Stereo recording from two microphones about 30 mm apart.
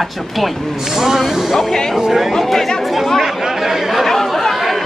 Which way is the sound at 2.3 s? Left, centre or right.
Centre.